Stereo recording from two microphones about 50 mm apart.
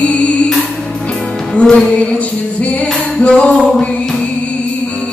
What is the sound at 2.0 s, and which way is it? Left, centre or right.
Music, left.